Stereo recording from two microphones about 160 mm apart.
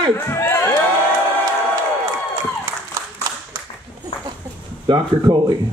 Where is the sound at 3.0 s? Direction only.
20° right (ahead or behind).